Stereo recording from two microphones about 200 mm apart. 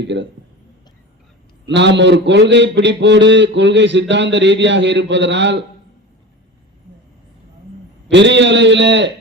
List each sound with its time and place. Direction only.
0.0 s a man's voice: 60° right (ahead or behind)
1.6 s a man's voice: 60° right (ahead or behind)
8.0 s a man's voice: 60° right (ahead or behind)